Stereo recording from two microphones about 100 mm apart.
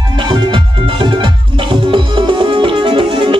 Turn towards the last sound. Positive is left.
turn(degrees=-60)  # may be behind; listen again after turning